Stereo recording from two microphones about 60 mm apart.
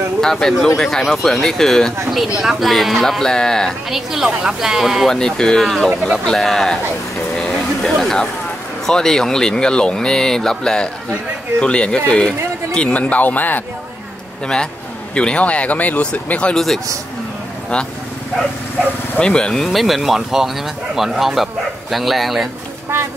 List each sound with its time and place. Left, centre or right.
0.2 s speech: centre
3.9 s a woman's voice: centre
5.1 s speech: centre
7.3 s a sound: centre
8.8 s speech: centre; by 13.7 s left
15.1 s speech: centre
16.5 s speech: centre
19.1 s speech: centre
19.6 s speech: centre